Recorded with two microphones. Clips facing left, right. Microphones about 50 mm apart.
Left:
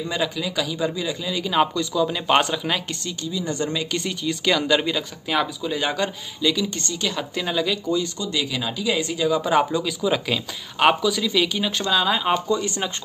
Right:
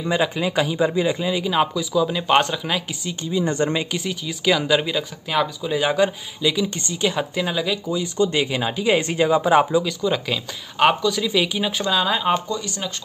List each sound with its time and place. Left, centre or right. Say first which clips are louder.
0.0 s a man's voice: right 4 dB; right
1.3 s speech: right 1 dB; centre
3.1 s speech: right 5 dB; right
3.9 s a man's voice: left 1 dB; centre
7.3 s a man's voice: right 1 dB; centre
8.2 s speech: right 6 dB; right
9.4 s a man's voice: right 3 dB; centre
9.8 s speech: even; centre
11.2 s speech: right 1 dB; centre
12.4 s speech: left 4 dB; left